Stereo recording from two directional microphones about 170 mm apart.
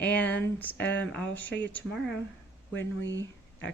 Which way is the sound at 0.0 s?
10° left (ahead or behind).